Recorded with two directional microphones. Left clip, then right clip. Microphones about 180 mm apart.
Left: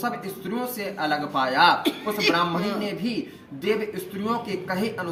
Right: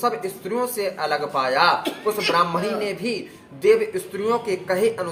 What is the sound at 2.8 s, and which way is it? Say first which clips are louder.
Speech: right 4 dB; 30° right (ahead or behind).